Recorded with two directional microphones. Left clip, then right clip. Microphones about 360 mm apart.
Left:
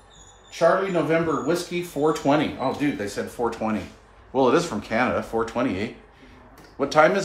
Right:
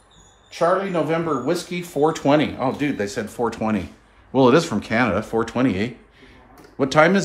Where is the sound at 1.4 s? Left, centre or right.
Centre.